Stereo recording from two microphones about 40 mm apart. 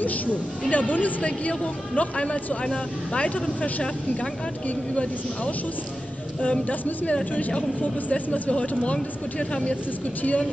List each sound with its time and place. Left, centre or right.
0.0 s speech: left
4.6 s speech: left
7.3 s speech: left